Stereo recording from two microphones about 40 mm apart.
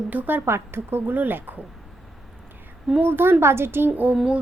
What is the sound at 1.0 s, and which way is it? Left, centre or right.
Speech, right.